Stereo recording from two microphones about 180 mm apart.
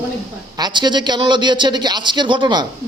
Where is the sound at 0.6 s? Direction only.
25° right (ahead or behind).